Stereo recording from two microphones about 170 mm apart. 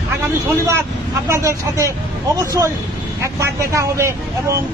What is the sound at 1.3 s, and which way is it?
Speech, 15° right (ahead or behind).